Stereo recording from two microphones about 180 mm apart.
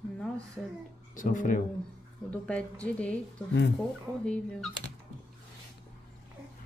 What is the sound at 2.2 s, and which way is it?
Speech, 5° left (ahead or behind).